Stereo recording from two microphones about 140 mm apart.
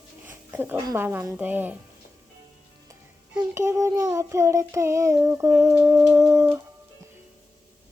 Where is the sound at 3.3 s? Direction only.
20° right (ahead or behind).